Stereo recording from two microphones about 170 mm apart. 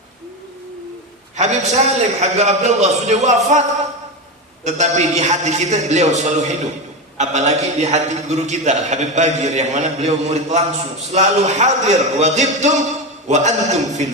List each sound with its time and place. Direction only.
1.4 s a man's voice: 40° right (ahead or behind)
4.6 s a man's voice: 40° right (ahead or behind)